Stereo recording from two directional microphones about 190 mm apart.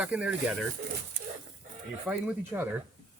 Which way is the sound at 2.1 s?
5° right (ahead or behind).